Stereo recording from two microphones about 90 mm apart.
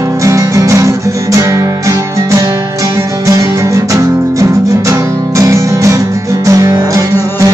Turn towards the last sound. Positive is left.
turn(degrees=-40)  # may be behind; listen again after turning